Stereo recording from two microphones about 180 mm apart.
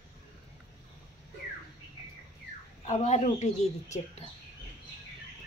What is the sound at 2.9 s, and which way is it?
A woman's voice, 40° left (ahead or behind).